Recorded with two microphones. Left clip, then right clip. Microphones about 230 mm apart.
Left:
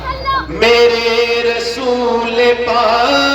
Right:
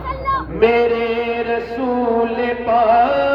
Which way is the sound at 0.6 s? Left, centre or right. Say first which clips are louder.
Left 5 dB; left.